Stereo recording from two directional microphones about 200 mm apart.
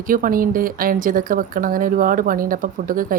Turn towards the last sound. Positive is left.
turn(degrees=-45)  # may be behind; listen again after turning